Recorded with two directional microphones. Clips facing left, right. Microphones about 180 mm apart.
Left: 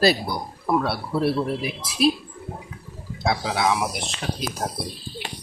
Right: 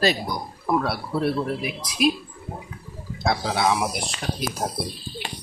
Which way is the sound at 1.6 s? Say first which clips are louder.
Left 1 dB; 35° left (ahead or behind).